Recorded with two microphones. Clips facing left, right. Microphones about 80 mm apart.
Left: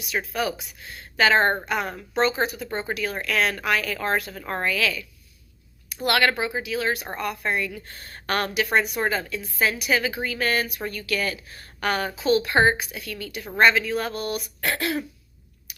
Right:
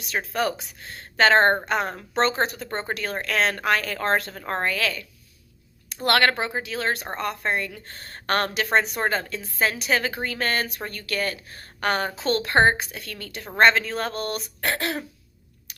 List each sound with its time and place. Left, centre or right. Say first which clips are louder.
0.1 s a woman's voice: right 1 dB; right
1.5 s a woman's voice: right 2 dB; right
6.1 s a woman's voice: right 1 dB; right
7.1 s a woman's voice: right 1 dB; right
7.9 s a woman's voice: right 2 dB; right
14.7 s a woman's voice: left 1 dB; right